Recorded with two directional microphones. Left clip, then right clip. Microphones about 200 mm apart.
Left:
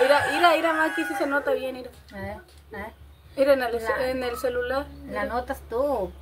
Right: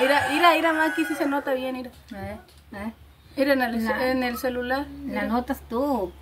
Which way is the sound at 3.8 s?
25° right (ahead or behind).